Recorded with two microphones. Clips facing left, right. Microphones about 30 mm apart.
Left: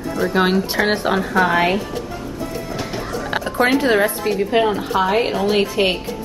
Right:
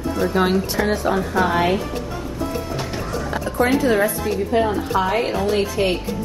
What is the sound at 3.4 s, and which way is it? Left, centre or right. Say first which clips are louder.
Speech: left 1 dB; left.